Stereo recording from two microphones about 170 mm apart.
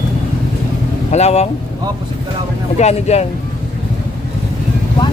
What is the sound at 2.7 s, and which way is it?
Speech, 40° left (ahead or behind).